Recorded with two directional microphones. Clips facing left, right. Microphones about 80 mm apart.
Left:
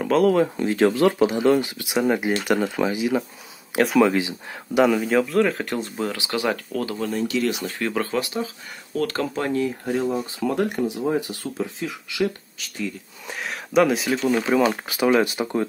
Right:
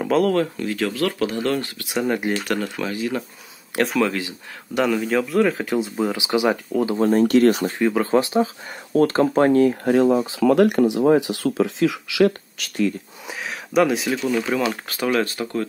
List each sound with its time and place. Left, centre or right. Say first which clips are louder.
0.0 s speech: left 1 dB; centre
0.6 s speech: left 4 dB; left; by 4.0 s centre
4.0 s speech: left 3 dB; centre
4.7 s speech: left 2 dB; centre
7.0 s speech: right 10 dB; right
7.8 s speech: right 4 dB; centre
8.1 s speech: right 7 dB; right
9.3 s speech: right 8 dB; right
13.3 s speech: even; centre